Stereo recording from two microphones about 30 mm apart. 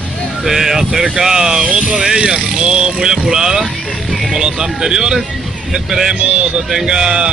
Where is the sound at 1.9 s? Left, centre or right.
Centre.